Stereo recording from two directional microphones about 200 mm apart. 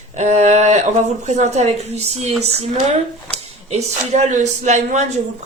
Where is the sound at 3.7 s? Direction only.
35° right (ahead or behind).